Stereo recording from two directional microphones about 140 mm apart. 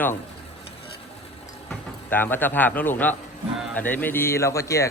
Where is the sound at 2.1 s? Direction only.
15° left (ahead or behind).